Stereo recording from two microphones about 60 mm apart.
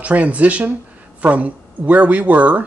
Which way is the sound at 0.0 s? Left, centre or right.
Right.